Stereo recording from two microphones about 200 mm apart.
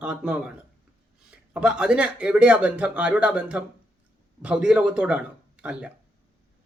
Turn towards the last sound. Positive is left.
turn(degrees=-5)  # may be behind; listen again after turning